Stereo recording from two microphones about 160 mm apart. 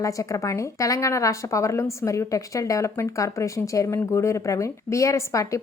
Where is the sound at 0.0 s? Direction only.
20° left (ahead or behind).